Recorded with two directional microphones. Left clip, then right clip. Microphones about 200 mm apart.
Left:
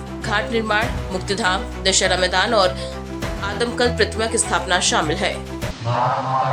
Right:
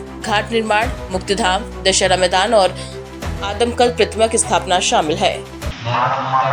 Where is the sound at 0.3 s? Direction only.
15° right (ahead or behind).